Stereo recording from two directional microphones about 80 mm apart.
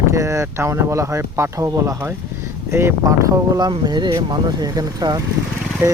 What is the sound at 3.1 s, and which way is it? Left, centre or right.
Speech, right.